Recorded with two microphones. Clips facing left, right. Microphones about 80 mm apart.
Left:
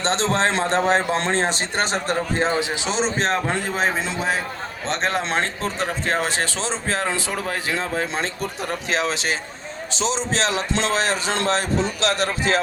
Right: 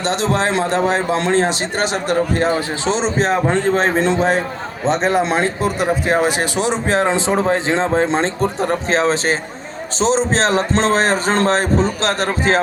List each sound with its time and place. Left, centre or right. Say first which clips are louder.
0.5 s speech: right 2 dB; left
2.6 s speech: right 5 dB; centre
3.0 s speech: right 3 dB; centre
3.8 s speech: right 7 dB; centre; by 12.5 s right